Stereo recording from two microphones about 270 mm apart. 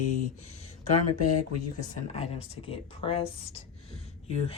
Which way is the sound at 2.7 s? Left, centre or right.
Centre.